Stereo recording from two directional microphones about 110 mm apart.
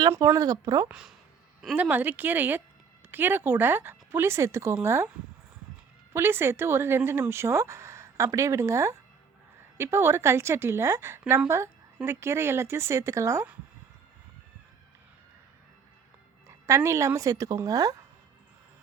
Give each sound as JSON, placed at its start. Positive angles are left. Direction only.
{"t": 0.3, "sound": "speech", "side_deg": -35}
{"t": 0.9, "sound": "speech", "side_deg": -5}
{"t": 6.1, "sound": "speech", "side_deg": -20}
{"t": 16.5, "sound": "speech", "side_deg": -25}